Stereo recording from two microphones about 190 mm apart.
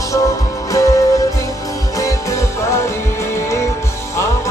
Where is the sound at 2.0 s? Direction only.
15° left (ahead or behind).